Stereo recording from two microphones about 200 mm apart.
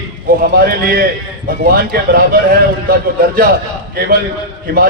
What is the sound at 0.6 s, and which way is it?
A man's voice, 50° right (ahead or behind).